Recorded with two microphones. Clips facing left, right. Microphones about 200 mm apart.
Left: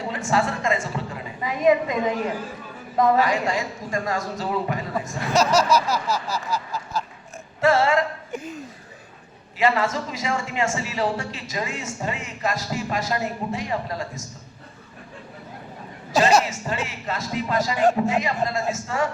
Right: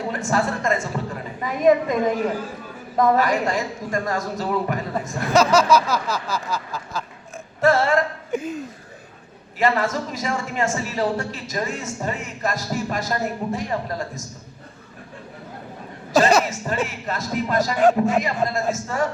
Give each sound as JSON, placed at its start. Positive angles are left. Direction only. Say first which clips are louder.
{"t": 0.1, "sound": "a woman's voice", "louder": "even", "side_deg": -45}
{"t": 3.2, "sound": "a woman's voice", "louder": "right 1 dB", "side_deg": -40}
{"t": 5.3, "sound": "speech", "louder": "right 3 dB", "side_deg": -55}
{"t": 7.6, "sound": "a sound", "louder": "right 1 dB", "side_deg": -40}
{"t": 9.6, "sound": "a woman's voice", "louder": "right 1 dB", "side_deg": -40}
{"t": 16.1, "sound": "speech", "louder": "right 2 dB", "side_deg": -50}